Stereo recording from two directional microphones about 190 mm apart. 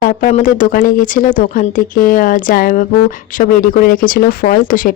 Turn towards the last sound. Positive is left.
turn(degrees=45)  # may be behind; listen again after turning